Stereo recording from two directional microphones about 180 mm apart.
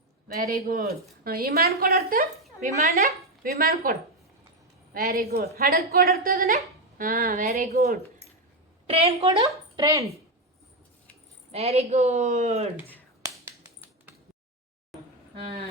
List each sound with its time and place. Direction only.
0.4 s a woman's voice: 55° right (ahead or behind)
2.6 s speech: 40° right (ahead or behind)
4.9 s a woman's voice: 55° right (ahead or behind); by 7.8 s 40° right (ahead or behind)
8.9 s speech: 35° right (ahead or behind)
9.8 s speech: 15° right (ahead or behind)
11.5 s speech: 35° right (ahead or behind)